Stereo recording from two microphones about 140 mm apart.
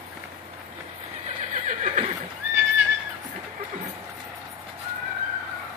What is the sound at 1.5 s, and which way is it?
Neigh, 60° right (ahead or behind).